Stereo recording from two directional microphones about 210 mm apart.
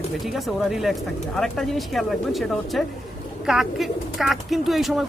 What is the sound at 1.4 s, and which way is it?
Speech, centre (ahead or behind).